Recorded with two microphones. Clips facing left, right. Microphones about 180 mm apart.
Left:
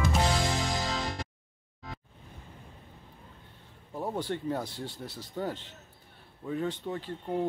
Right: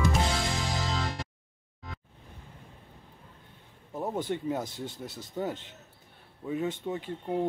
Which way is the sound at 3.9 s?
Centre (ahead or behind).